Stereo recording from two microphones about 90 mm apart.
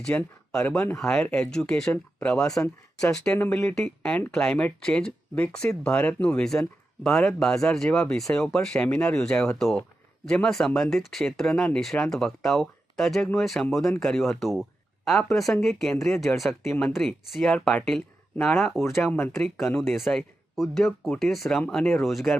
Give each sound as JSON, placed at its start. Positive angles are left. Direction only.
{"t": 0.0, "sound": "speech", "side_deg": 15}
{"t": 1.2, "sound": "speech", "side_deg": 15}
{"t": 3.3, "sound": "speech", "side_deg": 25}
{"t": 3.8, "sound": "speech", "side_deg": 10}
{"t": 19.0, "sound": "speech", "side_deg": 25}
{"t": 19.8, "sound": "speech", "side_deg": 0}